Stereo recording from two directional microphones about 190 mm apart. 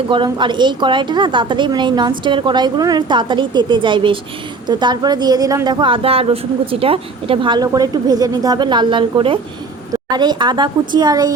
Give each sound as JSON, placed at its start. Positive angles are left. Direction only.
{"t": 0.1, "sound": "a woman's voice", "side_deg": -25}